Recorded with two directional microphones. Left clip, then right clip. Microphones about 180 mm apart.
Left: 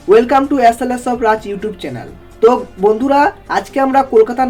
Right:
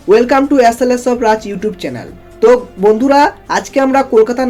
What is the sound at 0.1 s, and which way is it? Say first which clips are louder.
Speech: right 1 dB; 25° right (ahead or behind).